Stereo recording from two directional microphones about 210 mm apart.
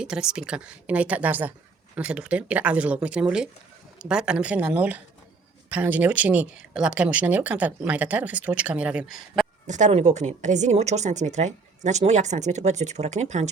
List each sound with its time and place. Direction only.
0.0 s speech: 5° right (ahead or behind)
9.6 s speech: 35° right (ahead or behind)